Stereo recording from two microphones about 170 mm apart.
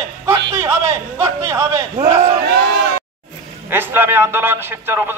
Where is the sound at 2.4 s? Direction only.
90° right.